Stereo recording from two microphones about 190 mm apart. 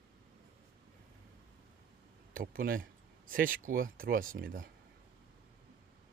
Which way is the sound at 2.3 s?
50° right (ahead or behind).